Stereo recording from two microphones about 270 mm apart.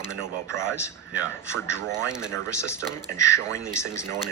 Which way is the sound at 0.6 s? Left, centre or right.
Centre.